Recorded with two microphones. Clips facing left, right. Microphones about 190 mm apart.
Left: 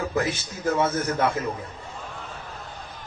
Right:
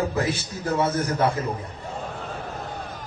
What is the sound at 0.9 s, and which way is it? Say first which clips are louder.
Speech: right 1 dB; 30° right (ahead or behind).